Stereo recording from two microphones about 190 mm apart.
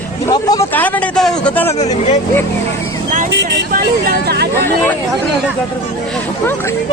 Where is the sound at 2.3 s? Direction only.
10° left (ahead or behind).